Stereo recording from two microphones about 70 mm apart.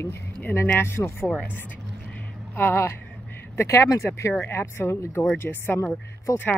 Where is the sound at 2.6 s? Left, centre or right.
Left.